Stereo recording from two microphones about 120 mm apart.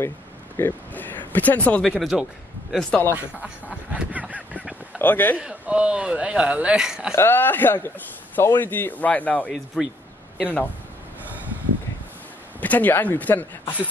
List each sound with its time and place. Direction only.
0.6 s speech: 15° left (ahead or behind)
3.0 s speech: 20° left (ahead or behind)
3.9 s a sound: 10° right (ahead or behind)
4.9 s a man's voice: 15° left (ahead or behind)
5.4 s speech: 10° right (ahead or behind)
7.2 s speech: 15° left (ahead or behind)
12.5 s speech: 15° left (ahead or behind)